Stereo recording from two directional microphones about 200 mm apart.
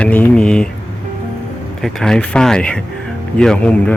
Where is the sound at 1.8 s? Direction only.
Centre (ahead or behind).